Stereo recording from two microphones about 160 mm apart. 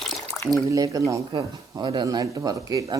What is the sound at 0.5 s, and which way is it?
Speech, 20° right (ahead or behind).